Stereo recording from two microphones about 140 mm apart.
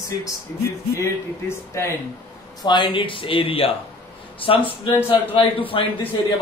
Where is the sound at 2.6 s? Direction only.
35° left (ahead or behind).